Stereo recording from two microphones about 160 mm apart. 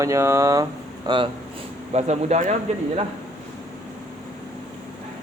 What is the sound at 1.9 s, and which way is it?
Speech, 45° right (ahead or behind).